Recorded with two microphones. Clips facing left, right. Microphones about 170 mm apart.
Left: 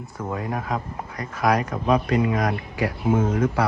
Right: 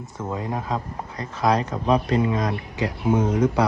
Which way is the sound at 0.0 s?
20° right (ahead or behind).